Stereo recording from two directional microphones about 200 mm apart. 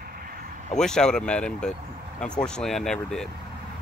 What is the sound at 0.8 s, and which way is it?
Speech, 5° left (ahead or behind).